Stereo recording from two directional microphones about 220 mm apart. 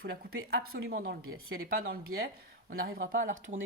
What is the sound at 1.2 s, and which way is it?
Speech, 70° right (ahead or behind).